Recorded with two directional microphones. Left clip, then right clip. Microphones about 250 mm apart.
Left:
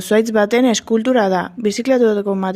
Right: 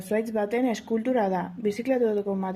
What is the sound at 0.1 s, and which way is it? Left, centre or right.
Speech, left.